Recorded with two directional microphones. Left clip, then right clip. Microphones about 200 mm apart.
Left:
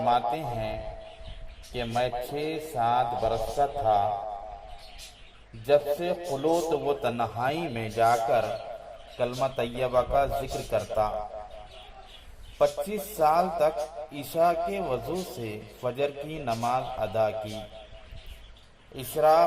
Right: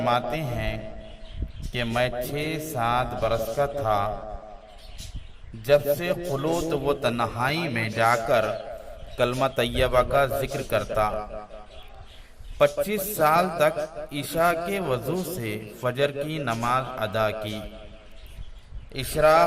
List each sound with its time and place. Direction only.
0.0 s a man's voice: 35° right (ahead or behind)
5.6 s a man's voice: 35° right (ahead or behind)
12.5 s a man's voice: 40° right (ahead or behind)
18.9 s a man's voice: 35° right (ahead or behind)